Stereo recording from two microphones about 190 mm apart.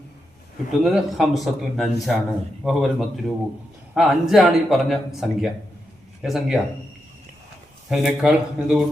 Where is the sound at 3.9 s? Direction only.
Centre (ahead or behind).